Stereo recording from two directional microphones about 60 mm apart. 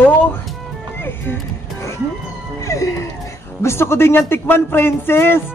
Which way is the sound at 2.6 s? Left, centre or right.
Left.